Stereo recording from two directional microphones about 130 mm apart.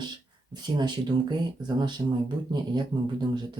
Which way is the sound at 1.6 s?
35° right (ahead or behind).